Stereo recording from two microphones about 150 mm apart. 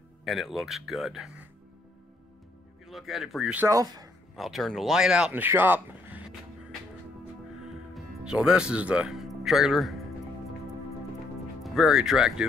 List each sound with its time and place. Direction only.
0.2 s speech: centre (ahead or behind)
2.9 s speech: centre (ahead or behind)
3.6 s speech: 25° right (ahead or behind)
4.4 s speech: centre (ahead or behind)
7.9 s speech: 5° right (ahead or behind)
11.6 s speech: centre (ahead or behind)